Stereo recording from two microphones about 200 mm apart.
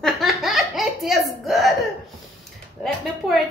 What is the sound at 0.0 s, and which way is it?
Belly laugh, centre (ahead or behind).